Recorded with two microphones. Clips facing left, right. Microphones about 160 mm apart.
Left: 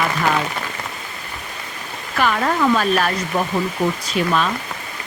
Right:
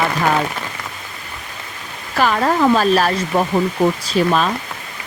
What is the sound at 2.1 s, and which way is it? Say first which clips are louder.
Speech: right 3 dB; 35° right (ahead or behind).